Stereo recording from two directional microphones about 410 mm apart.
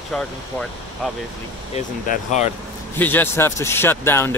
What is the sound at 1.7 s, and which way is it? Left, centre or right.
Speech, centre.